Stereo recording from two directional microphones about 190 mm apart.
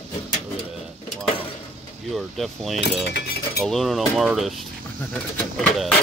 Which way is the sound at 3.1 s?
55° left (ahead or behind).